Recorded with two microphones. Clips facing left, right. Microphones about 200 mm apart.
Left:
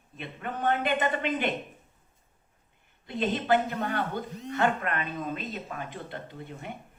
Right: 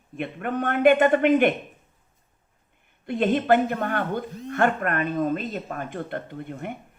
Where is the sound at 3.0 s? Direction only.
55° right (ahead or behind).